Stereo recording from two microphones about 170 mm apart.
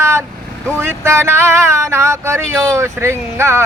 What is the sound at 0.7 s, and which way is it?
Speech, 15° right (ahead or behind).